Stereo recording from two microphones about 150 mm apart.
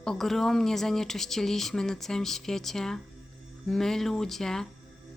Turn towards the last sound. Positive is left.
turn(degrees=5)  # may be behind; listen again after turning